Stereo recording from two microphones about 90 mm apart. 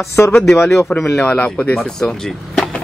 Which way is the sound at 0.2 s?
25° left (ahead or behind).